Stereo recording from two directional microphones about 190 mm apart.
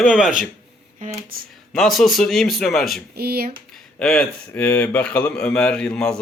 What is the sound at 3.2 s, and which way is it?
Speech, 55° right (ahead or behind).